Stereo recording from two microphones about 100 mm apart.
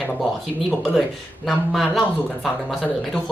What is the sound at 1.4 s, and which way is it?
Speech, centre (ahead or behind).